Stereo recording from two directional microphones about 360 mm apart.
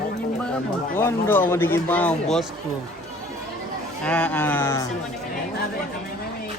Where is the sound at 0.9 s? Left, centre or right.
Centre.